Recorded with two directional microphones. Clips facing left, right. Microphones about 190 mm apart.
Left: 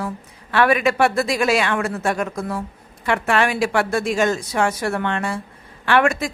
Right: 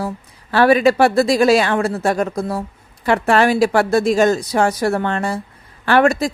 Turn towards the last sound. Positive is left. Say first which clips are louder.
# right 4 dB
turn(degrees=-35)  # may be behind; listen again after turning